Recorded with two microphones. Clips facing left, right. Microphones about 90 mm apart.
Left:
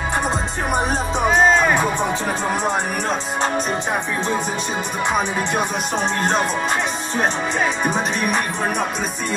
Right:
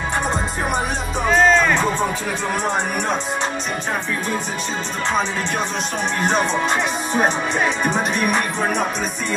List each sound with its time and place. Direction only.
1.3 s music: 15° left (ahead or behind)
7.5 s music: 5° left (ahead or behind)